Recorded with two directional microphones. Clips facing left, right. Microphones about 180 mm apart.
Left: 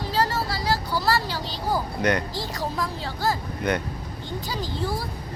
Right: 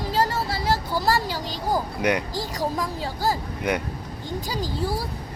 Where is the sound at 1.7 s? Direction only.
10° right (ahead or behind).